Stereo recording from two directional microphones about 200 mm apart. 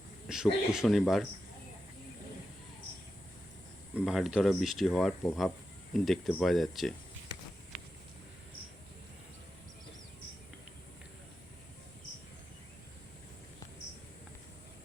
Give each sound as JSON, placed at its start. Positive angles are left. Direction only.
{"t": 0.3, "sound": "speech", "side_deg": -5}
{"t": 3.9, "sound": "speech", "side_deg": 0}